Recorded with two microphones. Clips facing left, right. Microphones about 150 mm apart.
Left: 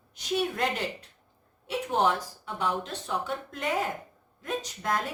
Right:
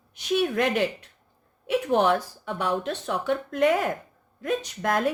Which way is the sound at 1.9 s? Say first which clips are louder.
Right 4 dB; 65° right (ahead or behind).